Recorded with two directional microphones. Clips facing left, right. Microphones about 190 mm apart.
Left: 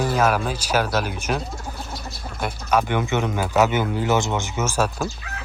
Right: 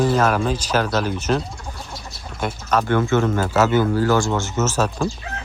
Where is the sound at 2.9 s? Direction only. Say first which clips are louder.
Right 5 dB; 15° left (ahead or behind).